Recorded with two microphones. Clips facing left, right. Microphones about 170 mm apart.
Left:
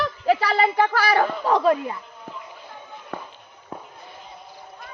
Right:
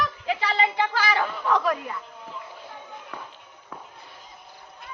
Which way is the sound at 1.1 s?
40° left (ahead or behind).